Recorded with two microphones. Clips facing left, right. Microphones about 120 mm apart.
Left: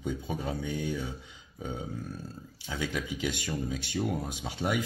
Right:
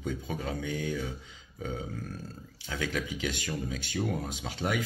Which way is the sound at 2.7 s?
20° left (ahead or behind).